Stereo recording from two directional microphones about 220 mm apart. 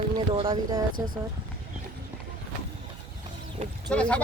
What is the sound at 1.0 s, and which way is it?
Speech, 10° right (ahead or behind).